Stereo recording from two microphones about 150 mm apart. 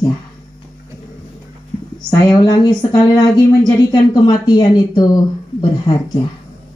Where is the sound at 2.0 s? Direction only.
30° left (ahead or behind).